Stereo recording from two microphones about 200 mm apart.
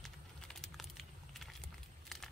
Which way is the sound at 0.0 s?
Centre (ahead or behind).